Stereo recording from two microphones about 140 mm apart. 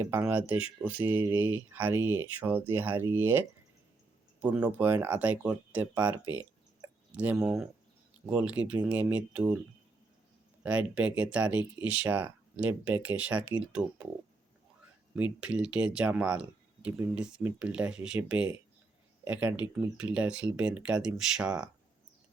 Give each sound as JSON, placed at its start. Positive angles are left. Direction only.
{"t": 0.0, "sound": "speech", "side_deg": -15}
{"t": 10.6, "sound": "speech", "side_deg": -10}
{"t": 15.1, "sound": "speech", "side_deg": -10}